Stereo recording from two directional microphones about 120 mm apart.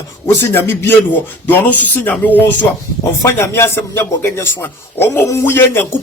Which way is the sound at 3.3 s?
20° left (ahead or behind).